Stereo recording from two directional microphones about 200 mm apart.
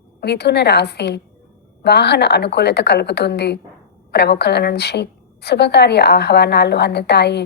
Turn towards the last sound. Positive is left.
turn(degrees=55)  # may be behind; listen again after turning